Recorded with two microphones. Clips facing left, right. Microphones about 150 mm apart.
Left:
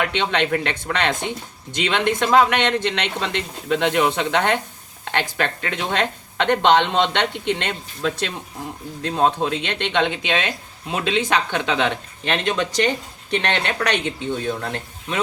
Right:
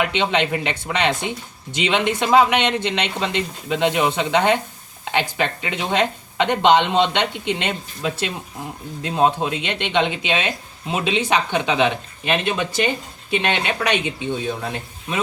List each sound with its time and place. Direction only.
0.0 s speech: 10° right (ahead or behind)